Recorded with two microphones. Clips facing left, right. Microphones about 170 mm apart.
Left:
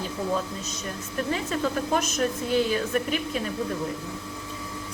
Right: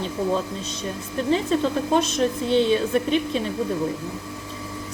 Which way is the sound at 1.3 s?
30° right (ahead or behind).